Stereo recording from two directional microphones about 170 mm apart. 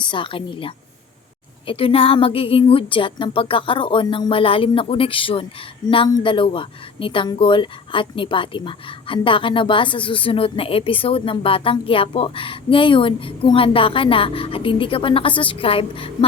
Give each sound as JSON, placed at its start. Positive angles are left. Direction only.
{"t": 0.0, "sound": "speech", "side_deg": 30}